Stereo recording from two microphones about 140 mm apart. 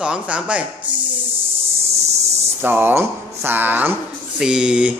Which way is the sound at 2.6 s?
15° right (ahead or behind).